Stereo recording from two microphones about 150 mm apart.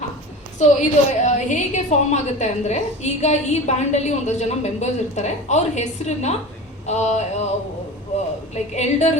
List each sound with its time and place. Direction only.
0.6 s a woman's voice: 50° left (ahead or behind)
8.7 s a woman's voice: 50° left (ahead or behind)